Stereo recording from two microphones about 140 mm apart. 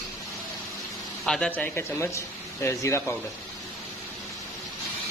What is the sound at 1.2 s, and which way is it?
Speech, 5° left (ahead or behind).